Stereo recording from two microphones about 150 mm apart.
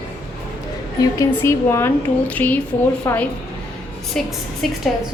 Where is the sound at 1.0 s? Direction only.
20° left (ahead or behind); by 4.8 s 5° left (ahead or behind).